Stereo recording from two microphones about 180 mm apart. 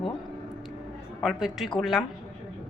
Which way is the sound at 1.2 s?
Centre (ahead or behind).